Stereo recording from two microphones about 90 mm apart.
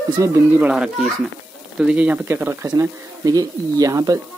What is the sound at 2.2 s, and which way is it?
Speech, 25° right (ahead or behind).